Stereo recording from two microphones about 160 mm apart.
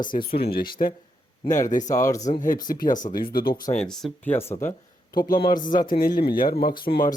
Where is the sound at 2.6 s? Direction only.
55° left (ahead or behind).